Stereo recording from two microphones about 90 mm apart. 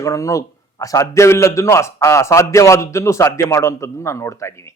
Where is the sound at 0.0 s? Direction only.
35° left (ahead or behind).